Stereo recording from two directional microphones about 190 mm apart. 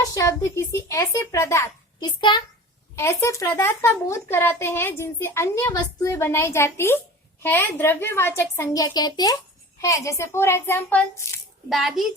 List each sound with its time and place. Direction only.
0.0 s speech: 20° left (ahead or behind); by 12.1 s centre (ahead or behind)